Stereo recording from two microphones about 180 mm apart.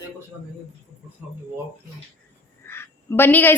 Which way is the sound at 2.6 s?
15° left (ahead or behind).